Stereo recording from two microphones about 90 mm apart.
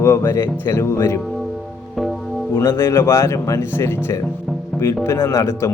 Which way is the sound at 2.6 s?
30° left (ahead or behind).